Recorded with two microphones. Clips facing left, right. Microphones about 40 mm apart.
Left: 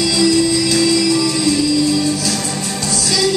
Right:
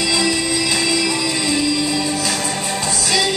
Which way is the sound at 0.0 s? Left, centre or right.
Right.